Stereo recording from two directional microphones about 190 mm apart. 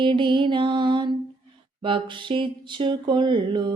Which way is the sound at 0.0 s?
25° right (ahead or behind).